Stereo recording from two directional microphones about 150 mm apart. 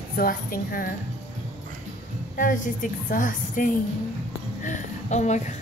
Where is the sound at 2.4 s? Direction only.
60° left (ahead or behind).